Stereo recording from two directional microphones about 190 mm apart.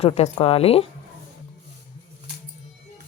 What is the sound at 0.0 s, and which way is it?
Speech, 30° left (ahead or behind).